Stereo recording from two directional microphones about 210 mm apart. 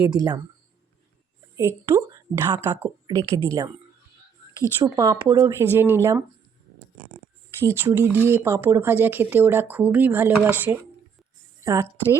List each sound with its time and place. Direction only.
1.5 s speech: 15° right (ahead or behind)
4.8 s speech: 15° right (ahead or behind)
7.6 s a woman's voice: 10° right (ahead or behind)